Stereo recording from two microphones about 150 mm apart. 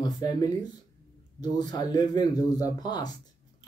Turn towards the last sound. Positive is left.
turn(degrees=25)  # may be behind; listen again after turning